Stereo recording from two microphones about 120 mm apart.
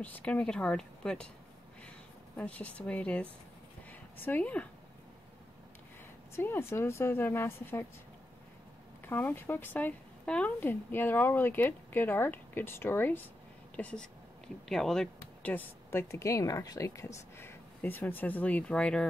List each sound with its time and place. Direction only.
0.0 s a woman's voice: 10° left (ahead or behind)
2.3 s a woman's voice: 10° left (ahead or behind)
6.3 s a woman's voice: 20° left (ahead or behind)
9.0 s a woman's voice: 15° left (ahead or behind)